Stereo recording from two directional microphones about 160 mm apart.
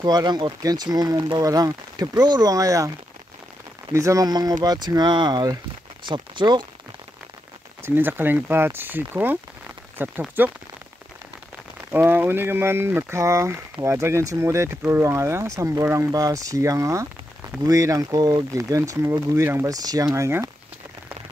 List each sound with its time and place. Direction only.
0.0 s speech: 25° right (ahead or behind)
3.9 s speech: 20° right (ahead or behind)
7.8 s speech: 10° right (ahead or behind)
11.9 s speech: 10° right (ahead or behind)